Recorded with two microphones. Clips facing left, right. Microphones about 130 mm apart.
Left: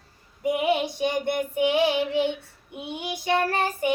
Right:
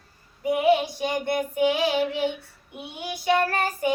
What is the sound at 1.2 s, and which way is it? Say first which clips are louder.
Child singing: right 1 dB; 25° left (ahead or behind).